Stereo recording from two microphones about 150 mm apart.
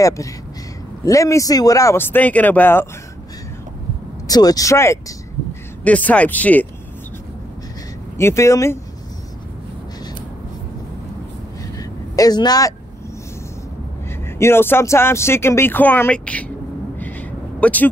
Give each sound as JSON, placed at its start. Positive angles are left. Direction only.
{"t": 1.0, "sound": "speech", "side_deg": 20}
{"t": 4.3, "sound": "speech", "side_deg": 25}
{"t": 8.2, "sound": "speech", "side_deg": 20}
{"t": 11.8, "sound": "vehicle", "side_deg": 25}
{"t": 14.2, "sound": "speech", "side_deg": 15}
{"t": 17.6, "sound": "speech", "side_deg": 10}